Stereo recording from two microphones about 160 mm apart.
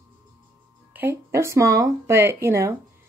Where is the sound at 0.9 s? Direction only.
15° right (ahead or behind).